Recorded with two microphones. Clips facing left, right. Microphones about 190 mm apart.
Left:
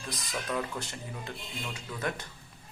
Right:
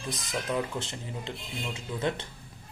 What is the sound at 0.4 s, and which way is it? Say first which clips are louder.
Speech: right 3 dB; 20° right (ahead or behind).